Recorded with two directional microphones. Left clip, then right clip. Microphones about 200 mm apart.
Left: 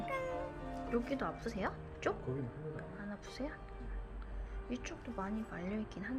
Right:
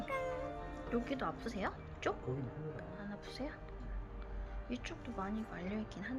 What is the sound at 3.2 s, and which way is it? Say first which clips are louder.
Speech: left 1 dB; 10° left (ahead or behind).